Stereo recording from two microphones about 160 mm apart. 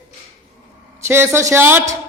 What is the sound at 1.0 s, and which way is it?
Speech, 15° right (ahead or behind).